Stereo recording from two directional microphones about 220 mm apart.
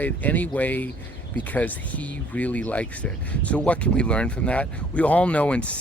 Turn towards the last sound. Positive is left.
turn(degrees=5)  # may be behind; listen again after turning